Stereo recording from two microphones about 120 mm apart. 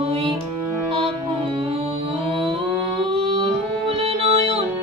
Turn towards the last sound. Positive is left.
turn(degrees=-50)  # may be behind; listen again after turning